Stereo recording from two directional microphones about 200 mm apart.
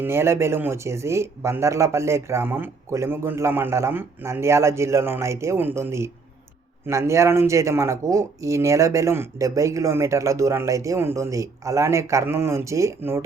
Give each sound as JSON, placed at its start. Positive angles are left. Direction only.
{"t": 0.0, "sound": "speech", "side_deg": -10}